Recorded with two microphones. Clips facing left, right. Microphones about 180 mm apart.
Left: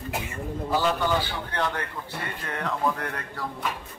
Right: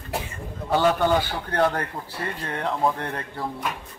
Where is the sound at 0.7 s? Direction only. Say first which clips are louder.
Right 5 dB; 60° right (ahead or behind); by 1.9 s 45° right (ahead or behind).